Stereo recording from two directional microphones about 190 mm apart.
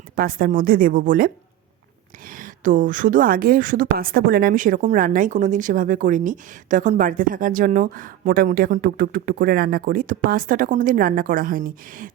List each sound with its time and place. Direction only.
0.2 s a woman's voice: 50° right (ahead or behind)
2.3 s a woman's voice: 45° right (ahead or behind)